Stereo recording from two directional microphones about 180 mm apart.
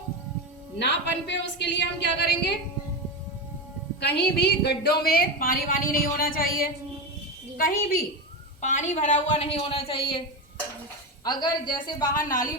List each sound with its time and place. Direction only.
0.8 s speech: 75° left (ahead or behind)
4.0 s a woman's voice: 65° left (ahead or behind)
8.6 s a woman's voice: 40° left (ahead or behind)
11.2 s a woman's voice: 25° left (ahead or behind)